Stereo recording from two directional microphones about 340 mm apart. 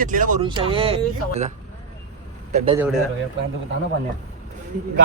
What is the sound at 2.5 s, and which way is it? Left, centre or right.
Speech, centre.